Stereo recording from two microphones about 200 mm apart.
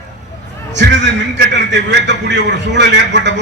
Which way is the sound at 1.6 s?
60° right (ahead or behind).